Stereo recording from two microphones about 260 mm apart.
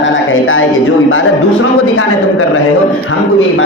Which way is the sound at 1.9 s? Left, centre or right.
Left.